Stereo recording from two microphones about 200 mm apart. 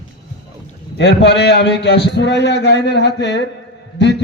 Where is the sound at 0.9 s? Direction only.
60° left (ahead or behind).